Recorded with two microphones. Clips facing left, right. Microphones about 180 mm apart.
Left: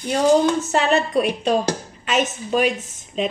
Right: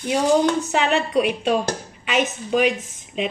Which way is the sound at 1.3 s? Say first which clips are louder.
Left 1 dB; 5° right (ahead or behind).